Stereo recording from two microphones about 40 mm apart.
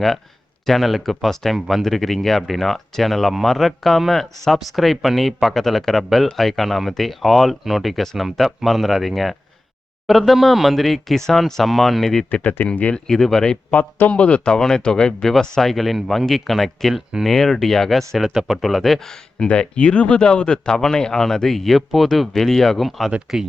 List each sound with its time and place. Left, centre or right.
0.6 s speech: centre
1.5 s speech: centre
1.8 s speech: centre
12.3 s speech: left
13.1 s speech: centre
13.7 s a man's voice: left
14.1 s speech: left
15.2 s speech: centre
15.7 s speech: centre
19.5 s speech: left; by 22.8 s centre
22.8 s speech: centre